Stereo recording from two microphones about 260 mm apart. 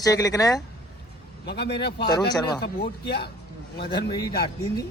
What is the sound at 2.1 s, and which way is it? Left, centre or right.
Speech, centre.